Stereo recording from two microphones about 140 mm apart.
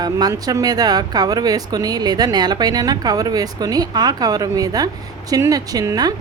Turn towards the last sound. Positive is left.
turn(degrees=-25)  # may be behind; listen again after turning